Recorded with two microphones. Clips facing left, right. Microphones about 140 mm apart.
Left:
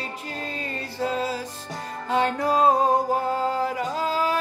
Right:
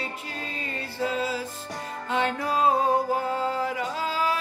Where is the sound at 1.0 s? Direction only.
40° left (ahead or behind).